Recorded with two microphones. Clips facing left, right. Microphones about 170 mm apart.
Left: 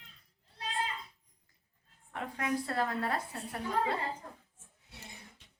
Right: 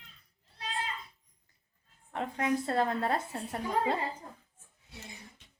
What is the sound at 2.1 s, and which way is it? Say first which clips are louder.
A woman's voice: right 4 dB; 25° right (ahead or behind).